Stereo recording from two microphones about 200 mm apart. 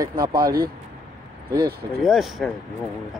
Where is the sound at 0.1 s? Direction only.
45° right (ahead or behind).